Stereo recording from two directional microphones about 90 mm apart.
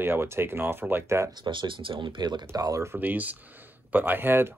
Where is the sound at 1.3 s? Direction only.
60° right (ahead or behind).